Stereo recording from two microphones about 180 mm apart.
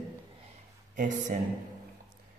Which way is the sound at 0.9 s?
45° right (ahead or behind).